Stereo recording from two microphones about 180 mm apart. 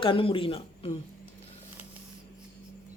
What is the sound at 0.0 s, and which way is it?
Speech, 30° left (ahead or behind).